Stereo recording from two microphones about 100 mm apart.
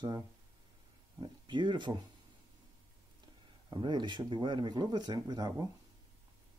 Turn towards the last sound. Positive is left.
turn(degrees=-40)  # may be behind; listen again after turning